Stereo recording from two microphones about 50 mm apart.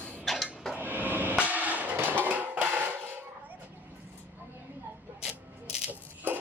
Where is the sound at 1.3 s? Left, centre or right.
Right.